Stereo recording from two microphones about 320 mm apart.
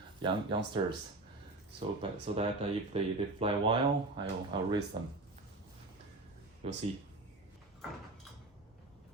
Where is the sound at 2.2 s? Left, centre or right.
Centre.